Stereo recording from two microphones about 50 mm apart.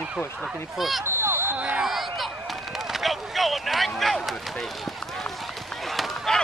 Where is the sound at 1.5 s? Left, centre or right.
Right.